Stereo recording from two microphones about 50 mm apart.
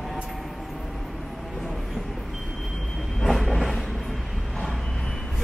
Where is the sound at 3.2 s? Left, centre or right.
Centre.